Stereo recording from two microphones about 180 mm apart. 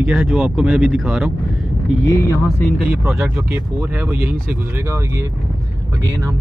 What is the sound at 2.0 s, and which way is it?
Speech, 20° left (ahead or behind).